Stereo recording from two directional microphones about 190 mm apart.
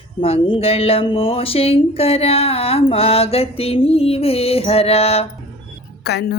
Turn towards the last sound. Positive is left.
turn(degrees=60)  # may be behind; listen again after turning